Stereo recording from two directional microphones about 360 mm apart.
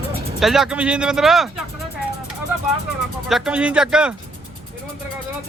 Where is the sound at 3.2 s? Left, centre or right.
Centre.